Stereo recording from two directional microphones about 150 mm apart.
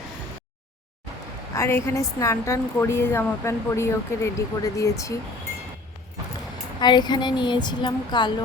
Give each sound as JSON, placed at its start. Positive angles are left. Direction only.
{"t": 1.5, "sound": "a woman's voice", "side_deg": 15}
{"t": 6.7, "sound": "a woman's voice", "side_deg": 30}